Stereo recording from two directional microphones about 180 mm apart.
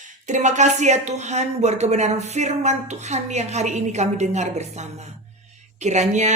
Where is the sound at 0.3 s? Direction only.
40° right (ahead or behind).